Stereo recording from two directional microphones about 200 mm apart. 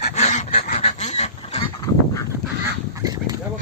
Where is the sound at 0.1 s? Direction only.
35° left (ahead or behind).